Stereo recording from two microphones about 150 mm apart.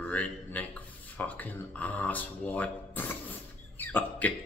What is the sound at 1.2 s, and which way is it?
Speech, 10° left (ahead or behind).